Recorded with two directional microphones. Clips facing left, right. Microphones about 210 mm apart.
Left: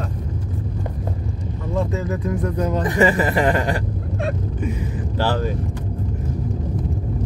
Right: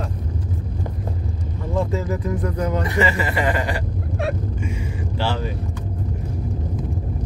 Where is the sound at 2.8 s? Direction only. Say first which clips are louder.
Left 4 dB; 45° left (ahead or behind).